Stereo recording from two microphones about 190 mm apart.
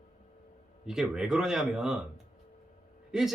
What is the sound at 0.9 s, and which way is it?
Speech, 5° right (ahead or behind).